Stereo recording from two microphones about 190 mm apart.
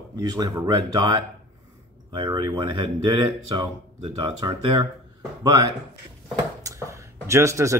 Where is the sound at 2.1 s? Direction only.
25° right (ahead or behind).